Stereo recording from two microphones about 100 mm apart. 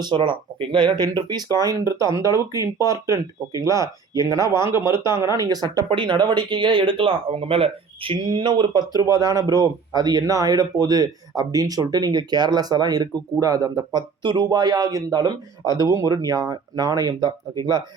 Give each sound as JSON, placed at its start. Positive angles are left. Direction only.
{"t": 0.0, "sound": "speech", "side_deg": -50}
{"t": 5.9, "sound": "speech", "side_deg": -55}
{"t": 8.9, "sound": "speech", "side_deg": -35}